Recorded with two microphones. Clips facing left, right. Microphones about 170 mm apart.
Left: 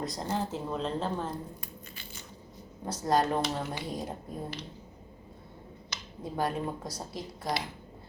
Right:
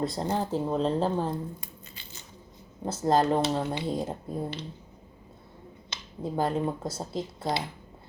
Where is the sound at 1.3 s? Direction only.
25° right (ahead or behind).